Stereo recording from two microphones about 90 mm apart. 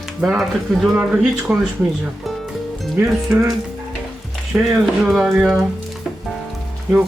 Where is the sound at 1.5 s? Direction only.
15° right (ahead or behind).